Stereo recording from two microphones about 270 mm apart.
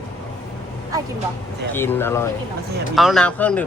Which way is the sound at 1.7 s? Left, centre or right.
Centre.